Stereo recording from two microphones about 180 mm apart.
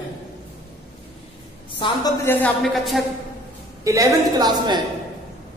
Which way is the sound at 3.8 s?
20° right (ahead or behind).